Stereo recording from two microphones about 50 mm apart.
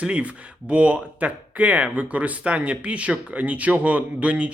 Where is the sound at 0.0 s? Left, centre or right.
Right.